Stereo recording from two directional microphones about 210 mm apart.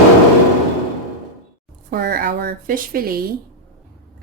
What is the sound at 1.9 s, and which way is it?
Speech, 50° right (ahead or behind).